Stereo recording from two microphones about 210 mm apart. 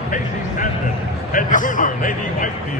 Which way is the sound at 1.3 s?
40° left (ahead or behind).